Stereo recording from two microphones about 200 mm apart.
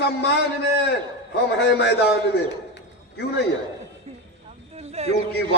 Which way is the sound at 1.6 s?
55° left (ahead or behind).